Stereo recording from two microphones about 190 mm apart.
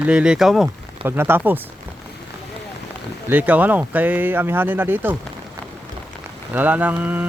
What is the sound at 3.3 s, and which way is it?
Speech, 10° right (ahead or behind).